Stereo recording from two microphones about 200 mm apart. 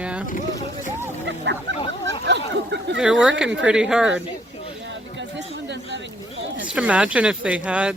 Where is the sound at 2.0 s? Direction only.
60° right (ahead or behind).